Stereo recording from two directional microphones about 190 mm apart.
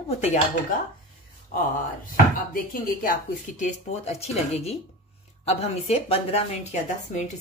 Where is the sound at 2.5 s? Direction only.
45° left (ahead or behind).